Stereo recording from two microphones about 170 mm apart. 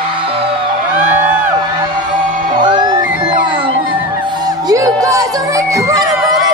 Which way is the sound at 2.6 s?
25° right (ahead or behind).